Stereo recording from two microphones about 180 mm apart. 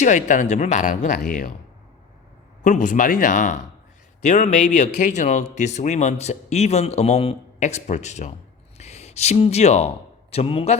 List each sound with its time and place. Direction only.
0.0 s speech: 45° left (ahead or behind)
2.6 s speech: 45° left (ahead or behind)